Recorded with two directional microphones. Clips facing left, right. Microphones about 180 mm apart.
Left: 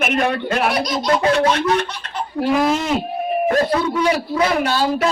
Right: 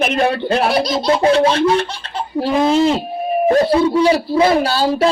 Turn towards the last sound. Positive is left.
turn(degrees=-30)  # may be behind; listen again after turning